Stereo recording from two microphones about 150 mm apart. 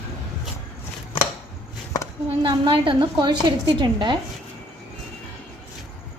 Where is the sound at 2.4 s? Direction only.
30° right (ahead or behind).